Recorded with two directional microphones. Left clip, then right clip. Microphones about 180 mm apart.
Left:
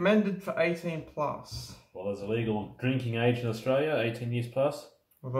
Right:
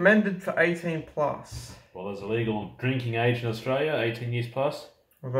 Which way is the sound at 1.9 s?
20° left (ahead or behind).